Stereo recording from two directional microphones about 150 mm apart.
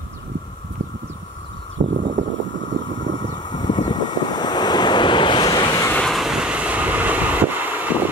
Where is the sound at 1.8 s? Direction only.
55° right (ahead or behind).